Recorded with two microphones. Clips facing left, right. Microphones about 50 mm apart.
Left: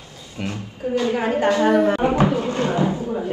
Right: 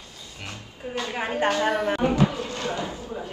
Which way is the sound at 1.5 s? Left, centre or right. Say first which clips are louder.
Left 9 dB; left.